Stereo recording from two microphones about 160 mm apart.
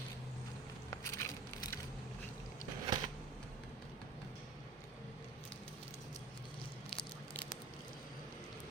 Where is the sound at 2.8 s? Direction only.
30° right (ahead or behind).